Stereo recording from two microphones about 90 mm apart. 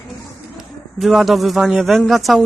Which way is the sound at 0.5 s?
5° right (ahead or behind).